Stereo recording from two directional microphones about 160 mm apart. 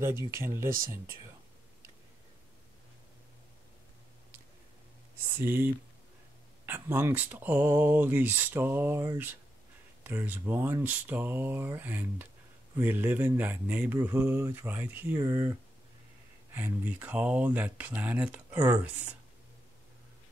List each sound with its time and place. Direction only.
0.2 s speech: 15° right (ahead or behind)
0.7 s speech: 60° right (ahead or behind)
5.4 s speech: 15° right (ahead or behind)
16.5 s speech: 10° right (ahead or behind)